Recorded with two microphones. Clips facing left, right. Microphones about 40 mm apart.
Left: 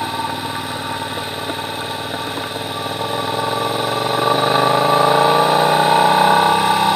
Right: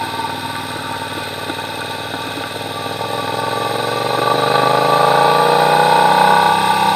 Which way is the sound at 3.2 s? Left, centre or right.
Right.